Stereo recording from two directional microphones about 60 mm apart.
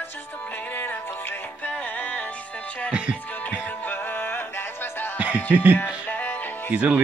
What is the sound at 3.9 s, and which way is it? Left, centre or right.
Music, left.